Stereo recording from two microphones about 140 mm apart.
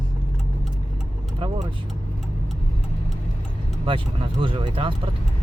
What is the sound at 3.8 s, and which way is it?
Speech, 40° right (ahead or behind).